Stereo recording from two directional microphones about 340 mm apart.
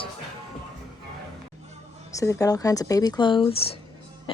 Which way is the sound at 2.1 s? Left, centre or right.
Centre.